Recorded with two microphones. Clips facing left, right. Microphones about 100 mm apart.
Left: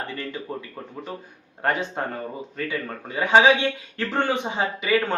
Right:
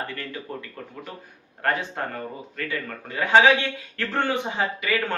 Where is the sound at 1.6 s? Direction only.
20° left (ahead or behind).